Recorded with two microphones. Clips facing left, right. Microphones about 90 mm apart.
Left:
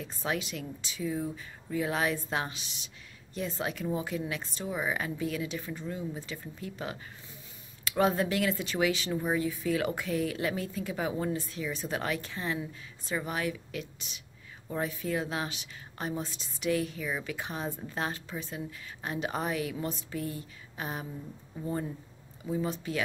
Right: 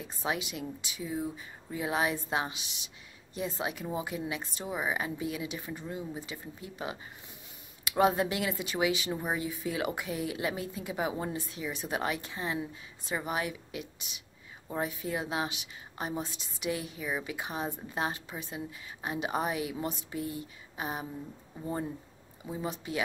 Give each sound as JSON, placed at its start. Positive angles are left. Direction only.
{"t": 0.2, "sound": "a woman's voice", "side_deg": -15}
{"t": 7.8, "sound": "a woman's voice", "side_deg": -15}
{"t": 20.2, "sound": "speech", "side_deg": 45}
{"t": 20.7, "sound": "a woman's voice", "side_deg": -15}